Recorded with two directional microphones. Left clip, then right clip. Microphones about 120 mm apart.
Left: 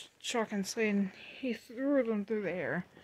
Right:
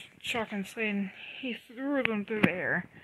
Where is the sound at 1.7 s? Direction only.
Centre (ahead or behind).